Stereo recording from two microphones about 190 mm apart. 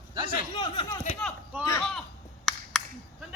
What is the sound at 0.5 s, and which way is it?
Speech, 25° left (ahead or behind).